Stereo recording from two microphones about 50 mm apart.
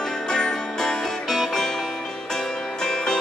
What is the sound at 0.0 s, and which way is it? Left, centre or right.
Music, centre.